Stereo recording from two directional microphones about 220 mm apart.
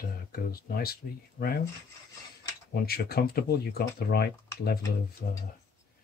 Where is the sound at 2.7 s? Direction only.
45° left (ahead or behind).